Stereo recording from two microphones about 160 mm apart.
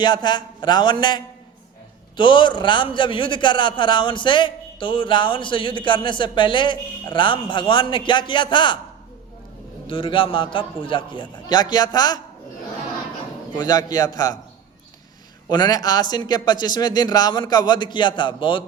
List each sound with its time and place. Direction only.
0.0 s a man's voice: 25° left (ahead or behind)
9.8 s a man's voice: 35° left (ahead or behind)
13.6 s speech: 25° left (ahead or behind)
15.4 s speech: 25° left (ahead or behind)